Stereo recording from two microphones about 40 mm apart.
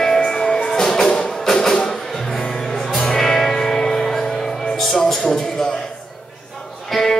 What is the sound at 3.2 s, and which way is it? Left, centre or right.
Music, centre.